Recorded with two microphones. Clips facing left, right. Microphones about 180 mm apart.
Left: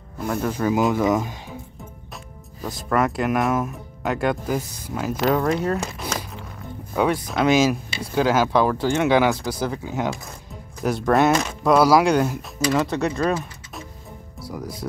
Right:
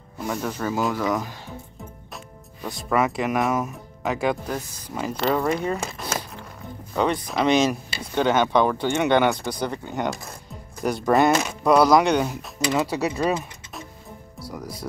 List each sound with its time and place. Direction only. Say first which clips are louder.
0.2 s speech: left 4 dB; centre (ahead or behind); by 1.3 s 20° left (ahead or behind)
2.6 s speech: left 1 dB; centre (ahead or behind)
14.5 s speech: left 3 dB; centre (ahead or behind)